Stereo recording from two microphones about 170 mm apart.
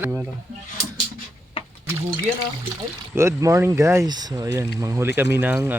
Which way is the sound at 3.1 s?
15° right (ahead or behind).